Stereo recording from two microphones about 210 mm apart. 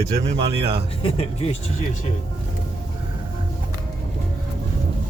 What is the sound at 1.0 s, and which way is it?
Speech, 25° left (ahead or behind).